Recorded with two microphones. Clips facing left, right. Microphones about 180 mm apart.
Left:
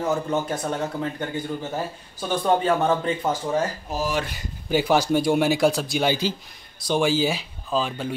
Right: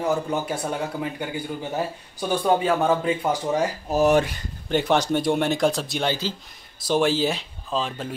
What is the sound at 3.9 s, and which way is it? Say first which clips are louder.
Speech: right 8 dB; 60° right (ahead or behind).